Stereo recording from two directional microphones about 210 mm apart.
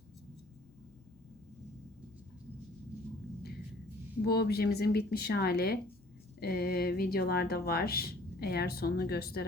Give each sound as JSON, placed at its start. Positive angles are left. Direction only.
{"t": 4.2, "sound": "speech", "side_deg": 50}